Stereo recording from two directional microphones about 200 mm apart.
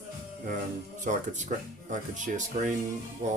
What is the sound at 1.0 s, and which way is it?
Speech, 40° right (ahead or behind).